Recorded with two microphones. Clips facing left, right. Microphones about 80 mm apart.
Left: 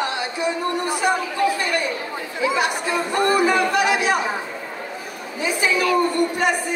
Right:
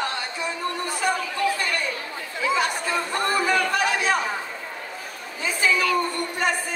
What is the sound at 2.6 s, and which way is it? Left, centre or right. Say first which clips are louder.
Speech: left 3 dB; centre.